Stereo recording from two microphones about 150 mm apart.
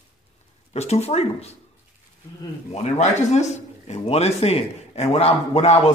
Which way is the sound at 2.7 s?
50° left (ahead or behind).